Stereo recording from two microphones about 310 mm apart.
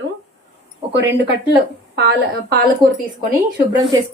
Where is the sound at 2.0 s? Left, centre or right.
Right.